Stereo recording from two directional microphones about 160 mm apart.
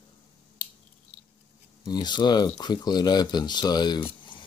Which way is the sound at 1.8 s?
25° left (ahead or behind).